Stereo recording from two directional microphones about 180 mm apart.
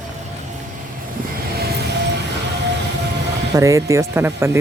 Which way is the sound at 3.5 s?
15° right (ahead or behind).